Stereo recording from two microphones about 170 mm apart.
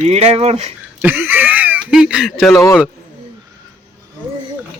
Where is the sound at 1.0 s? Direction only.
10° right (ahead or behind).